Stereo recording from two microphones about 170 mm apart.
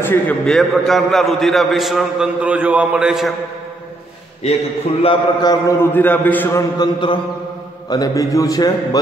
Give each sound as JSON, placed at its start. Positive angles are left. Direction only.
{"t": 0.0, "sound": "a man's voice", "side_deg": 10}
{"t": 5.0, "sound": "a man's voice", "side_deg": 25}
{"t": 6.8, "sound": "a man's voice", "side_deg": 30}